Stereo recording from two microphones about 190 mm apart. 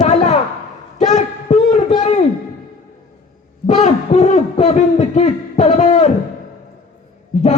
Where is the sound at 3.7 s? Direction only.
35° left (ahead or behind).